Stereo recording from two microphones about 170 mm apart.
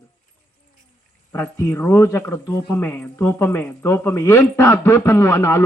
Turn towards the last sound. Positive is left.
turn(degrees=15)  # may be behind; listen again after turning